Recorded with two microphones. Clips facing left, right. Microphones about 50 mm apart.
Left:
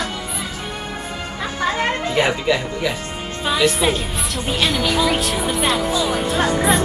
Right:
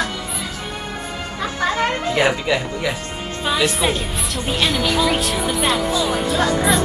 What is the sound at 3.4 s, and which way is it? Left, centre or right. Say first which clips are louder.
Speech: left 2 dB; centre.